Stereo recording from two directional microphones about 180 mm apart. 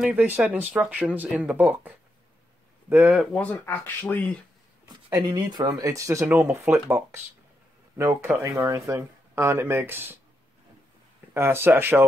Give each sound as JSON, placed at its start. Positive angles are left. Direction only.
{"t": 0.0, "sound": "speech", "side_deg": -5}
{"t": 3.3, "sound": "speech", "side_deg": 10}
{"t": 5.1, "sound": "speech", "side_deg": -20}
{"t": 11.3, "sound": "speech", "side_deg": -15}